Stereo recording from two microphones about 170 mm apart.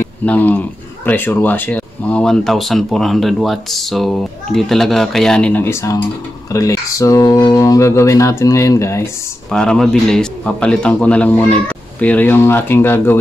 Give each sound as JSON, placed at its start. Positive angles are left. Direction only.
{"t": 0.0, "sound": "speech", "side_deg": 10}
{"t": 9.5, "sound": "a man's voice", "side_deg": 5}